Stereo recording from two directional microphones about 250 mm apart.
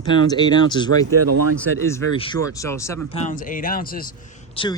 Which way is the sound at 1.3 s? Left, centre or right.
Right.